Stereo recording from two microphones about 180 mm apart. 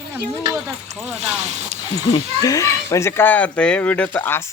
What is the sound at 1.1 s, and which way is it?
Speech, 35° right (ahead or behind).